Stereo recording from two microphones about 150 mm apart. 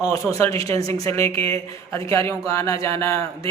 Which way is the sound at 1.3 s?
40° right (ahead or behind).